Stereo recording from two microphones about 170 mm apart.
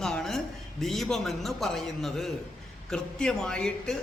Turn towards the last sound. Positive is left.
turn(degrees=5)  # may be behind; listen again after turning